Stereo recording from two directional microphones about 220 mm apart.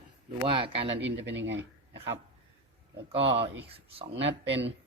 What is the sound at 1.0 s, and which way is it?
Speech, 55° right (ahead or behind).